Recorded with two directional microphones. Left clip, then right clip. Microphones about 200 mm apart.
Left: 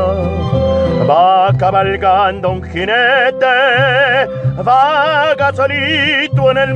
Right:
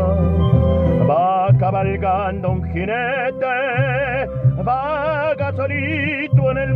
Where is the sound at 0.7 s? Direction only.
20° left (ahead or behind).